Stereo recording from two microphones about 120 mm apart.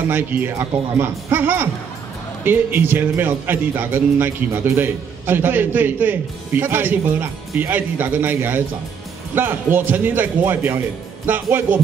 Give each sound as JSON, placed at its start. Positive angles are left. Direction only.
{"t": 0.1, "sound": "a man's voice", "side_deg": -15}